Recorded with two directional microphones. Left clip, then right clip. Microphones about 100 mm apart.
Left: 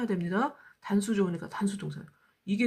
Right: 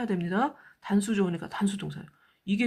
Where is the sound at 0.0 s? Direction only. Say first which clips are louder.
Right 2 dB; 25° right (ahead or behind).